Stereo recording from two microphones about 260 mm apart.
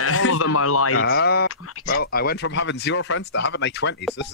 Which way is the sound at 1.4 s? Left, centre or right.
Left.